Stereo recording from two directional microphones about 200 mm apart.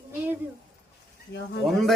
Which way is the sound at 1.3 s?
55° left (ahead or behind).